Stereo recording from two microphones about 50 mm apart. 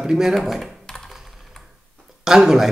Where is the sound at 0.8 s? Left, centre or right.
Centre.